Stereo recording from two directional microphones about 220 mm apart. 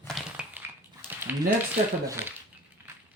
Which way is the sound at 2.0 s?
10° right (ahead or behind).